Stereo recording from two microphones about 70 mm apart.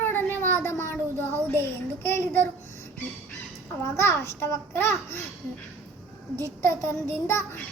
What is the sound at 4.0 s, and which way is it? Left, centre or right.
A child's voice, left.